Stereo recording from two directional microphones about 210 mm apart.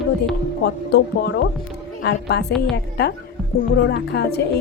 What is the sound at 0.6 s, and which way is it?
A woman's voice, 50° left (ahead or behind).